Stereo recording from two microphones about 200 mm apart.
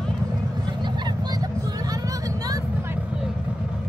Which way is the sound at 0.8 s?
20° right (ahead or behind).